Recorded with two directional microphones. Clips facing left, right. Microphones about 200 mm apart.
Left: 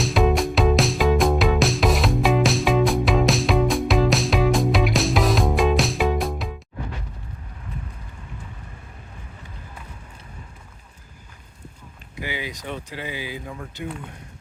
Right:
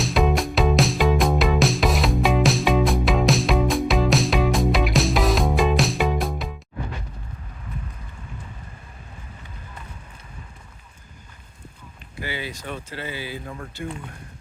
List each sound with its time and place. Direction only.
0.0 s music: centre (ahead or behind)
12.2 s speech: 15° left (ahead or behind)